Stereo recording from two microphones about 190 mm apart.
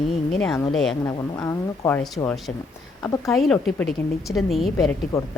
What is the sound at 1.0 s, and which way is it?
A woman's voice, 15° left (ahead or behind).